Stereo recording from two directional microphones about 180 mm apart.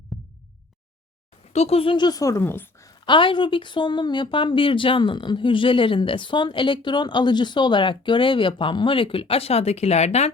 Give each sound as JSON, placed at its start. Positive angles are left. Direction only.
{"t": 0.1, "sound": "heart sounds", "side_deg": 0}
{"t": 1.5, "sound": "a woman's voice", "side_deg": 35}